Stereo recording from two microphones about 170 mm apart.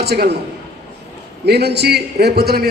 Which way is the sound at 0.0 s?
70° right (ahead or behind).